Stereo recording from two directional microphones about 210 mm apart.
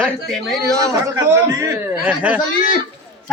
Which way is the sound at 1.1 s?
15° right (ahead or behind).